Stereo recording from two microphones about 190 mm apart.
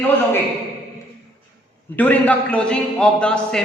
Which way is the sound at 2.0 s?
10° left (ahead or behind).